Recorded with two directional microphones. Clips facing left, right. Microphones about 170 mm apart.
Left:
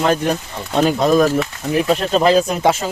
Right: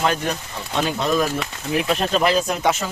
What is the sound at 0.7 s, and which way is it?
Speech, 40° left (ahead or behind).